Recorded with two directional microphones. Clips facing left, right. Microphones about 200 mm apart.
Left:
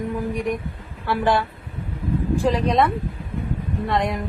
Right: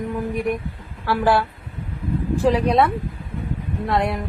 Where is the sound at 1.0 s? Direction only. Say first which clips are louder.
Right 2 dB; 5° right (ahead or behind).